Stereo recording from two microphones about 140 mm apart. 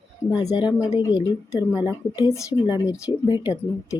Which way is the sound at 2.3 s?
20° left (ahead or behind).